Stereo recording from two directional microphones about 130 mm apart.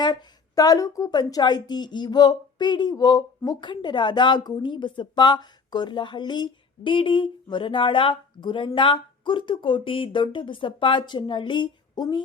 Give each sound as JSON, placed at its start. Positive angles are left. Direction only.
{"t": 0.0, "sound": "a woman's voice", "side_deg": 35}